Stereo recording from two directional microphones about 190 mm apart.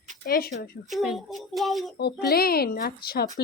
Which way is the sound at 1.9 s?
55° left (ahead or behind).